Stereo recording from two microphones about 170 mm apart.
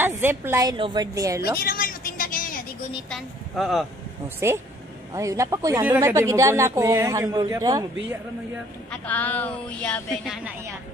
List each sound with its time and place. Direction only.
0.0 s a woman's voice: 15° right (ahead or behind)
1.6 s a sound: 55° left (ahead or behind)
3.1 s speech: centre (ahead or behind)
4.4 s speech: 15° right (ahead or behind)
8.9 s a woman's voice: 10° left (ahead or behind)